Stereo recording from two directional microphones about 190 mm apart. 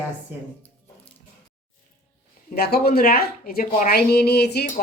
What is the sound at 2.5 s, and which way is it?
Speech, 55° left (ahead or behind).